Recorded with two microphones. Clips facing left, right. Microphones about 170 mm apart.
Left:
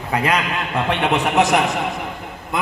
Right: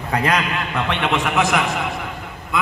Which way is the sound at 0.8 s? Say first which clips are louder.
Left 3 dB; 40° left (ahead or behind).